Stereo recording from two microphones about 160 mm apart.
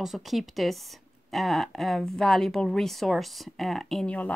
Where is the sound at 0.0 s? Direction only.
Centre (ahead or behind).